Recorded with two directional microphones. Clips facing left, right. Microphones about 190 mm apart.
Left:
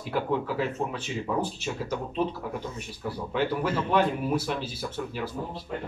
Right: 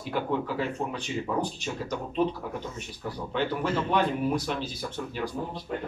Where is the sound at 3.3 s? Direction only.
5° left (ahead or behind).